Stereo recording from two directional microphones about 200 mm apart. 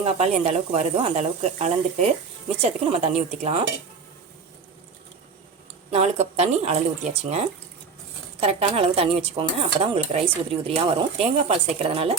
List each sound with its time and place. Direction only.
0.0 s speech: 30° right (ahead or behind)
5.9 s speech: 35° right (ahead or behind)